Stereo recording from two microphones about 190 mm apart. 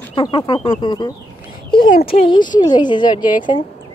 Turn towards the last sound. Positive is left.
turn(degrees=25)  # may be behind; listen again after turning